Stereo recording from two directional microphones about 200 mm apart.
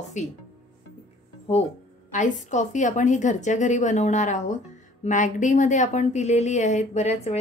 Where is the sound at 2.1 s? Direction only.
40° left (ahead or behind).